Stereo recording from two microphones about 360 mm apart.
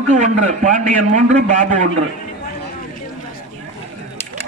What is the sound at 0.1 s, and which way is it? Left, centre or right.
A man's voice, centre.